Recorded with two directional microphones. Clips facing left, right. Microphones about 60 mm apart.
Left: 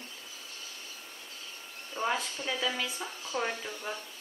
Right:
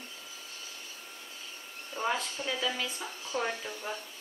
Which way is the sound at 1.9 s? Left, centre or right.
Centre.